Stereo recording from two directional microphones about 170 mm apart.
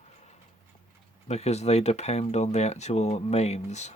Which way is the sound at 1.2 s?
40° left (ahead or behind).